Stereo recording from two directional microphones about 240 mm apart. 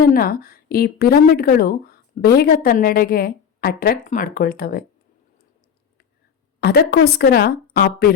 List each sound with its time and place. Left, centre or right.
0.0 s speech: left
6.6 s speech: left